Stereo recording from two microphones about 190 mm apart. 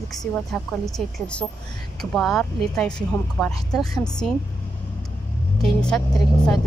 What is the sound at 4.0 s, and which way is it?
Speech, 5° left (ahead or behind).